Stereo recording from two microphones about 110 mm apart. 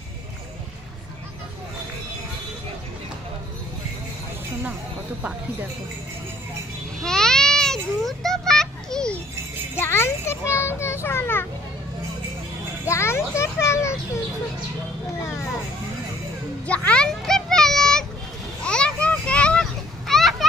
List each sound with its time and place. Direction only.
7.0 s a sound: 5° left (ahead or behind)
9.8 s children playing: 25° left (ahead or behind)
12.8 s children playing: 25° left (ahead or behind)
16.6 s music: 10° left (ahead or behind)
18.6 s children playing: 10° left (ahead or behind)